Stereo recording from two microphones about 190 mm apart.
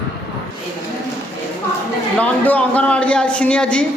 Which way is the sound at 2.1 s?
5° left (ahead or behind).